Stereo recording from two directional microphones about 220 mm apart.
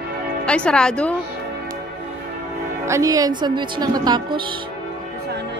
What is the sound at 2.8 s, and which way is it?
Speech, 15° right (ahead or behind).